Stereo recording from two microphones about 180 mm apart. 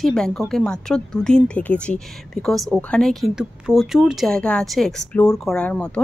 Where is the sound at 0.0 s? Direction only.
5° left (ahead or behind).